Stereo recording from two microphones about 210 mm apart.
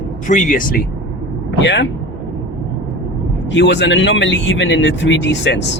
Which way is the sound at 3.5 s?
55° left (ahead or behind).